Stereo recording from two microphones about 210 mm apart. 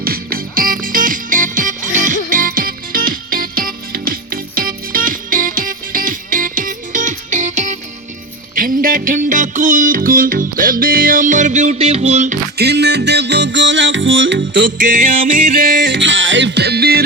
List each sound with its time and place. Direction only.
0.0 s music: 45° right (ahead or behind)
12.5 s music: 55° right (ahead or behind)
14.8 s music: 40° right (ahead or behind)
15.9 s music: 60° right (ahead or behind)